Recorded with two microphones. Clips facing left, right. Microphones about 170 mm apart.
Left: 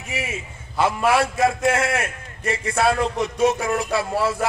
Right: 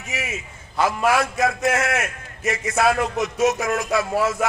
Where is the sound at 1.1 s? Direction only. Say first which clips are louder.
Left 2 dB; 30° left (ahead or behind).